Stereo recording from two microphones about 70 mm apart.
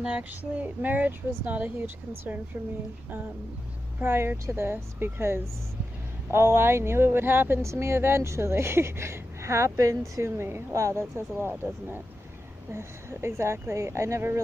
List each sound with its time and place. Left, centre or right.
0.6 s speech: right
4.0 s speech: right